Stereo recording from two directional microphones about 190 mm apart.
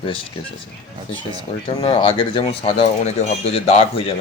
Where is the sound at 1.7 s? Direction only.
30° left (ahead or behind).